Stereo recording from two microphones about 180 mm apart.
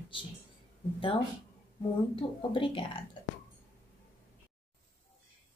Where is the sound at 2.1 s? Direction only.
30° left (ahead or behind).